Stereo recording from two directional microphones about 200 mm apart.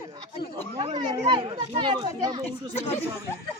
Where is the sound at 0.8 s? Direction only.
25° right (ahead or behind).